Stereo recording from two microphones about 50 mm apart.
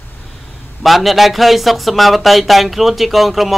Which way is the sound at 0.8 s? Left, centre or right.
Centre.